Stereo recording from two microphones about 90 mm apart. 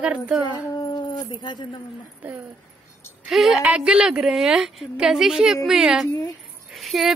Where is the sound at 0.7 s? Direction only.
55° left (ahead or behind).